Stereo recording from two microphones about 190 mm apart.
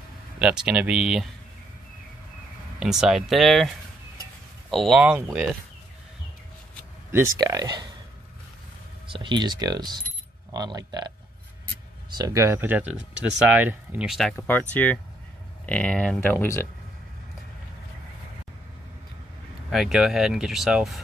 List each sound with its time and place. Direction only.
0.4 s speech: 5° right (ahead or behind)
2.8 s speech: centre (ahead or behind)
7.1 s speech: 15° right (ahead or behind)
9.0 s speech: 25° right (ahead or behind)
12.2 s speech: 15° right (ahead or behind); by 16.6 s 15° left (ahead or behind)
19.7 s speech: centre (ahead or behind)